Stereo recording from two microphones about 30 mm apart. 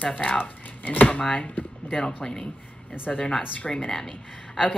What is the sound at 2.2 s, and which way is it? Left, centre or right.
Speech, left.